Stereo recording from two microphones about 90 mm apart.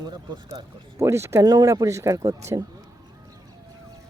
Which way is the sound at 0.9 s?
30° right (ahead or behind).